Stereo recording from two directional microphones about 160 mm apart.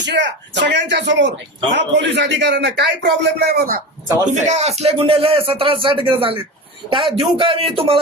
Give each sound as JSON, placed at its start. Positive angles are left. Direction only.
{"t": 0.0, "sound": "a man's voice", "side_deg": -90}
{"t": 4.3, "sound": "speech", "side_deg": -45}